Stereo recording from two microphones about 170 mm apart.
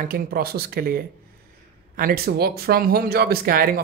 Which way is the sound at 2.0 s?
60° right (ahead or behind).